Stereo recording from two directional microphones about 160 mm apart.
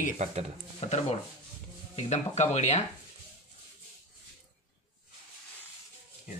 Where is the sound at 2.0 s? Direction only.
45° left (ahead or behind).